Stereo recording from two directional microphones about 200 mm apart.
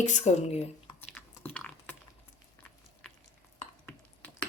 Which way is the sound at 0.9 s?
10° left (ahead or behind).